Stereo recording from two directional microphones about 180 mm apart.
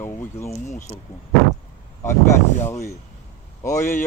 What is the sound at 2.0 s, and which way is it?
Speech, 15° left (ahead or behind).